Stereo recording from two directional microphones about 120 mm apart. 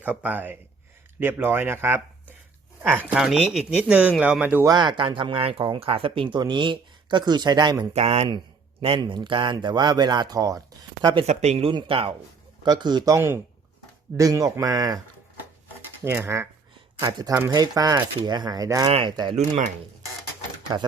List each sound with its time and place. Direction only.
0.0 s speech: 15° right (ahead or behind)
3.1 s speech: 5° right (ahead or behind)
4.6 s speech: 35° right (ahead or behind)
7.9 s speech: 60° right (ahead or behind)
8.8 s speech: 45° right (ahead or behind); by 11.1 s 30° right (ahead or behind)
11.3 s speech: 60° right (ahead or behind)
11.7 s speech: 45° right (ahead or behind)
12.6 s speech: 35° right (ahead or behind)
13.1 s speech: 20° right (ahead or behind)
14.2 s speech: 30° right (ahead or behind)
16.0 s speech: 20° right (ahead or behind)
17.0 s speech: 35° right (ahead or behind)
20.7 s speech: 35° right (ahead or behind)